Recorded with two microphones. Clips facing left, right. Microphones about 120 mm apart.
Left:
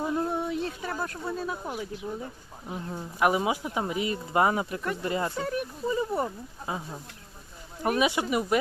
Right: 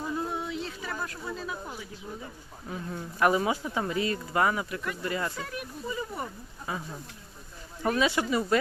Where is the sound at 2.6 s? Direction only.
20° left (ahead or behind).